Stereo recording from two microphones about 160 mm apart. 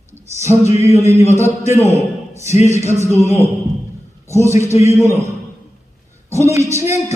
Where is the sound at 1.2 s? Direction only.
45° left (ahead or behind).